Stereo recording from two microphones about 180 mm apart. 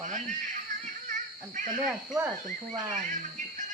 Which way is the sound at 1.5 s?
45° right (ahead or behind).